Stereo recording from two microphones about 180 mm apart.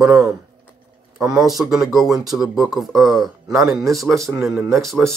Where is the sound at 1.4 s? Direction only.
Centre (ahead or behind).